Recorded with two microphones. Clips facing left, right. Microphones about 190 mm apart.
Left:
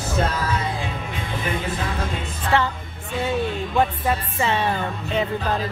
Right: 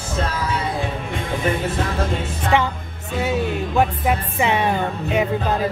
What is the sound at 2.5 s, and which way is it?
Speech, 15° right (ahead or behind).